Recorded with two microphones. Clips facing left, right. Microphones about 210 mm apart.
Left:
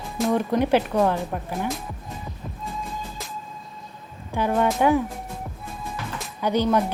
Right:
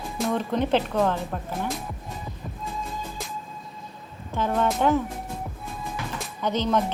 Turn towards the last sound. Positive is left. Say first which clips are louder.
# left 3 dB
turn(degrees=10)  # may be behind; listen again after turning